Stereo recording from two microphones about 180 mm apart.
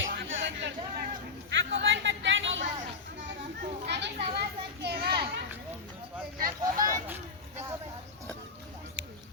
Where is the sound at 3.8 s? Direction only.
70° right (ahead or behind).